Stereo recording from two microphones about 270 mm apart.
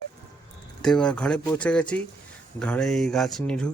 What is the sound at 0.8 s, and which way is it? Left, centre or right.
Speech, centre.